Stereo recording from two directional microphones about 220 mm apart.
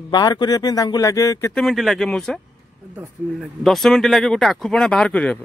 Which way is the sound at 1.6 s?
Centre (ahead or behind).